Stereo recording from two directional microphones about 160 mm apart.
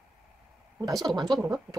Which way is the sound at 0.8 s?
25° right (ahead or behind).